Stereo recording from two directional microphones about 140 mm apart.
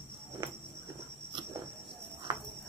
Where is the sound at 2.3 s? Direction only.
30° right (ahead or behind).